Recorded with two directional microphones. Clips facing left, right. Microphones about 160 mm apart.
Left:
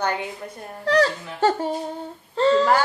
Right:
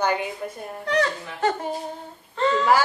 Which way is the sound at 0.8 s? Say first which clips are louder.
Left 4 dB; 35° left (ahead or behind).